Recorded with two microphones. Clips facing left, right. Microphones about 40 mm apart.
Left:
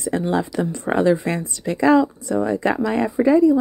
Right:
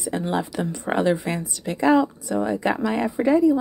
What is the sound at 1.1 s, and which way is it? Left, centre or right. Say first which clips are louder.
Speech: left 4 dB; left.